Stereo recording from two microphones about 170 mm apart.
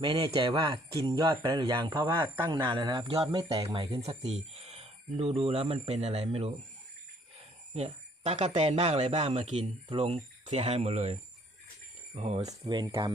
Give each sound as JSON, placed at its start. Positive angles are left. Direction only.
{"t": 0.0, "sound": "speech", "side_deg": -25}
{"t": 4.0, "sound": "speech", "side_deg": -35}
{"t": 7.7, "sound": "speech", "side_deg": -40}
{"t": 12.5, "sound": "speech", "side_deg": -25}